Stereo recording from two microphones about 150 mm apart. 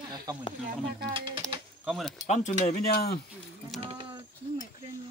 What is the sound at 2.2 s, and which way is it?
Speech, 50° left (ahead or behind).